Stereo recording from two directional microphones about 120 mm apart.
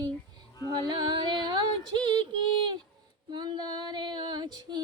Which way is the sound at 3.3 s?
35° right (ahead or behind).